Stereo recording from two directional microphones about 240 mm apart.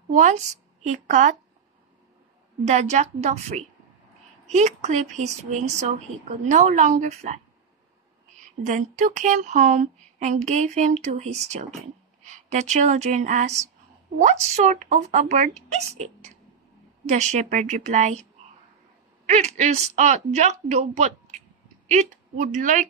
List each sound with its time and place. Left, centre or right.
0.1 s a woman's voice: right
2.6 s speech: right
8.6 s speech: right
19.2 s a woman's voice: right